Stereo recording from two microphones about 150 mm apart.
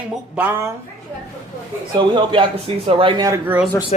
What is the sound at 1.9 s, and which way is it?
Speech, 35° right (ahead or behind).